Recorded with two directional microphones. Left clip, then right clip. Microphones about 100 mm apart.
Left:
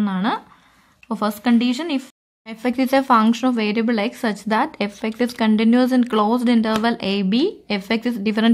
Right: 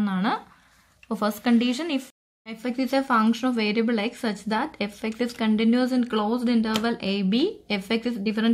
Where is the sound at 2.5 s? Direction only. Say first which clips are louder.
Left 7 dB; 50° left (ahead or behind); by 8.2 s 35° left (ahead or behind).